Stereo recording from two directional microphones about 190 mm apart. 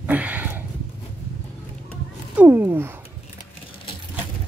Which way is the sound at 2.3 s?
10° right (ahead or behind).